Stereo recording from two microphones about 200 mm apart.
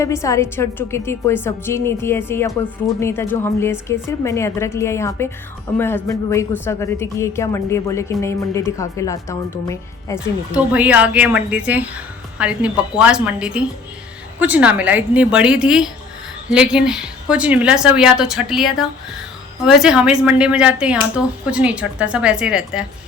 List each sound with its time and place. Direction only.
0.0 s a woman's voice: 15° left (ahead or behind)
10.5 s a woman's voice: 5° right (ahead or behind)